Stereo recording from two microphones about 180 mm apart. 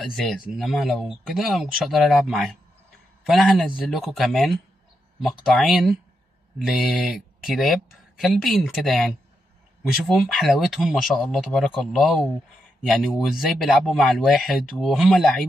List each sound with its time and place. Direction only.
0.0 s speech: centre (ahead or behind)